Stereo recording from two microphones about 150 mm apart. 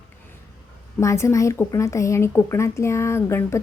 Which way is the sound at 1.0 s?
20° left (ahead or behind).